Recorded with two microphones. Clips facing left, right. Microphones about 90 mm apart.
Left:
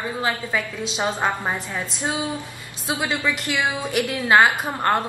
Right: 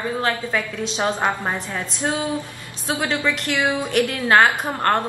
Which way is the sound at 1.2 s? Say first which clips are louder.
Right 1 dB; 10° right (ahead or behind).